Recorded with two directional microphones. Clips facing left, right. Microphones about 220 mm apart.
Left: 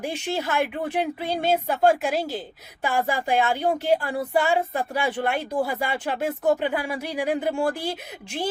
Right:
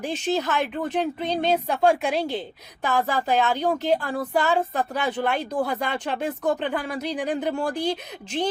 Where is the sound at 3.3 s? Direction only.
50° left (ahead or behind).